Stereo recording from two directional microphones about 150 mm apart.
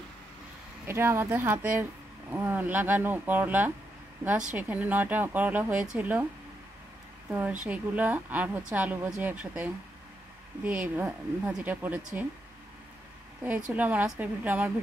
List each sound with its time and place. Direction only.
0.8 s speech: 15° right (ahead or behind)
7.2 s speech: 10° right (ahead or behind)
13.4 s speech: 10° right (ahead or behind)